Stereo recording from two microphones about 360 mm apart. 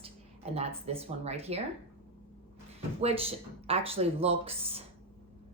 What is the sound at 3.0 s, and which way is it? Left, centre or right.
Speech, centre.